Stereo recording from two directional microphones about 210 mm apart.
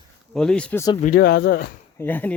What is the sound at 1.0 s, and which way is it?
Speech, 45° left (ahead or behind).